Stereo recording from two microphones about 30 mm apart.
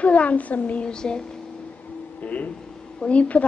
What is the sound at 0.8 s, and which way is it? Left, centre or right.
Speech, left.